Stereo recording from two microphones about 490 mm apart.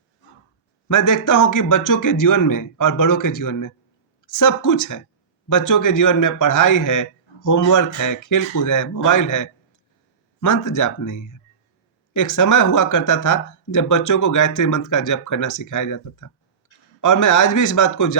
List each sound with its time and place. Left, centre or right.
0.9 s speech: left